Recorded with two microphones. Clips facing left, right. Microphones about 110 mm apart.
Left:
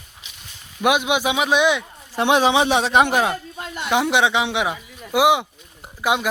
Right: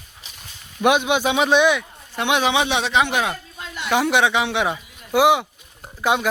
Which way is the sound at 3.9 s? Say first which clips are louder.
Even; 20° left (ahead or behind).